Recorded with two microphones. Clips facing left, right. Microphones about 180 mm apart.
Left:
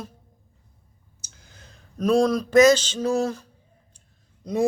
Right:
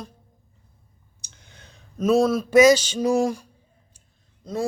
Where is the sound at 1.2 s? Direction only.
Centre (ahead or behind); by 3.5 s 15° right (ahead or behind).